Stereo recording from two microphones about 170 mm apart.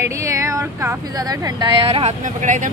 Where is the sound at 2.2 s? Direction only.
50° right (ahead or behind).